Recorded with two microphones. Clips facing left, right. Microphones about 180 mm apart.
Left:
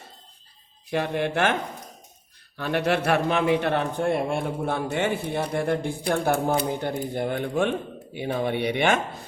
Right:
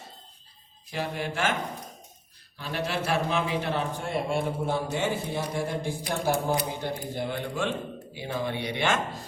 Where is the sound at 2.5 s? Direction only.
65° left (ahead or behind).